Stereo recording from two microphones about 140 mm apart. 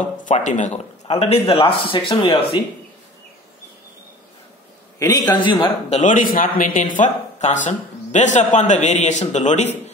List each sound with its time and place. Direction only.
0.0 s a man's voice: 65° left (ahead or behind); by 2.6 s 40° left (ahead or behind)
4.9 s a sound: 25° left (ahead or behind)
5.3 s a man's voice: 35° left (ahead or behind)
5.9 s speech: 60° left (ahead or behind)